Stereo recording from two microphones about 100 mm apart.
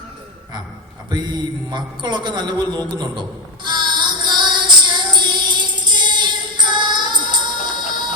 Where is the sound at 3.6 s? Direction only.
50° right (ahead or behind).